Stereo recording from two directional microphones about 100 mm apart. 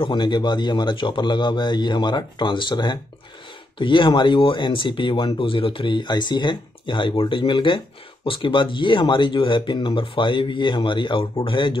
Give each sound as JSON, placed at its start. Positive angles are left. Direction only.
{"t": 0.0, "sound": "speech", "side_deg": 50}